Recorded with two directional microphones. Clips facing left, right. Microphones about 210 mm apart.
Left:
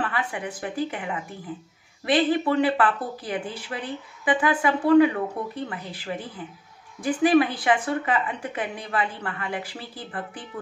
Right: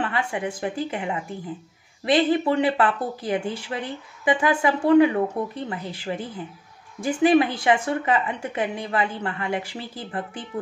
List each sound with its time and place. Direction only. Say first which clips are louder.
0.0 s a woman's voice: right 3 dB; 25° right (ahead or behind)